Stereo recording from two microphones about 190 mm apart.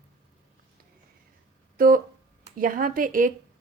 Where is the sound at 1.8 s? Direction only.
45° right (ahead or behind).